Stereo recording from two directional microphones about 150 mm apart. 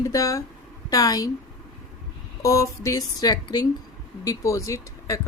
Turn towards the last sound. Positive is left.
turn(degrees=20)  # may be behind; listen again after turning